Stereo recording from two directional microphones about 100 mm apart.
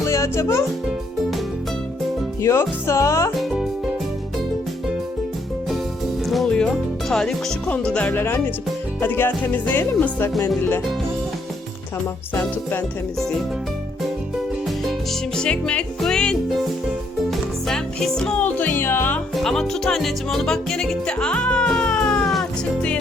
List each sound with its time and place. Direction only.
0.1 s speech: 30° left (ahead or behind)
2.4 s speech: 30° left (ahead or behind)
3.3 s music: 5° right (ahead or behind)
6.2 s music: 5° left (ahead or behind)
9.0 s speech: 20° left (ahead or behind)
12.3 s speech: 25° left (ahead or behind)
15.4 s music: 10° left (ahead or behind)
17.7 s music: 5° left (ahead or behind); by 19.2 s 20° left (ahead or behind)
19.4 s music: 5° left (ahead or behind)